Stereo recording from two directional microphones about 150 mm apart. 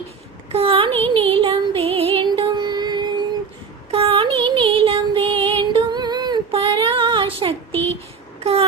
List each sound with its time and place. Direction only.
0.5 s speech: 35° right (ahead or behind)
1.1 s music: 40° right (ahead or behind)
3.9 s music: 40° right (ahead or behind)